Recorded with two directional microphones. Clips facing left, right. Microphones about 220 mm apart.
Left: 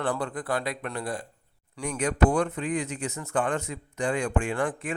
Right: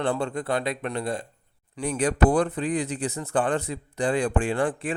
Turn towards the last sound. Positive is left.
turn(degrees=-30)  # may be behind; listen again after turning